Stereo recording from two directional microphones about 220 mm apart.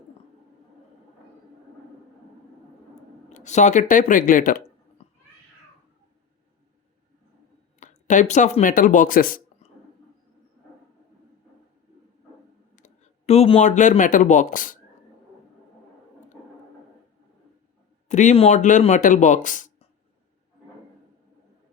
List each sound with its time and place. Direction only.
3.3 s speech: 30° left (ahead or behind)
7.8 s speech: 35° left (ahead or behind)
12.7 s speech: 30° left (ahead or behind)
18.1 s speech: 35° left (ahead or behind)